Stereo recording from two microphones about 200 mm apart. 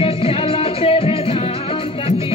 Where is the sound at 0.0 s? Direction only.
30° left (ahead or behind).